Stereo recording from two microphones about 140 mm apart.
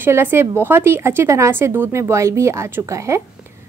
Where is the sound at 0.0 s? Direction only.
15° right (ahead or behind).